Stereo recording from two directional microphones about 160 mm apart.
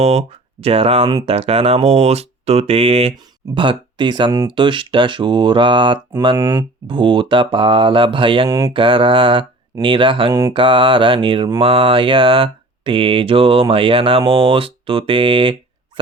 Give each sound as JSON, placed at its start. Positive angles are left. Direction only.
{"t": 0.0, "sound": "mantra", "side_deg": -40}
{"t": 6.3, "sound": "speech", "side_deg": -20}
{"t": 6.8, "sound": "mantra", "side_deg": -30}